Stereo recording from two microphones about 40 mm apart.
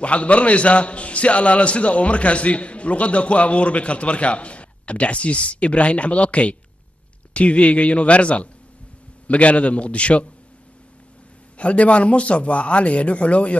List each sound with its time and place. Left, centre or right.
0.0 s a man's voice: left
11.5 s a man's voice: left